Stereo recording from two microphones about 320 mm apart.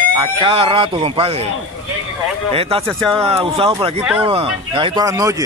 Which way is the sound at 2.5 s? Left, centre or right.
Centre.